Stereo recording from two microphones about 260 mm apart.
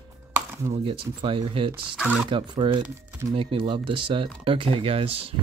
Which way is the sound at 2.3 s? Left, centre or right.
Centre.